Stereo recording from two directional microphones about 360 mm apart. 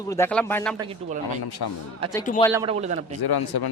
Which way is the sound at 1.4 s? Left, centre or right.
Left.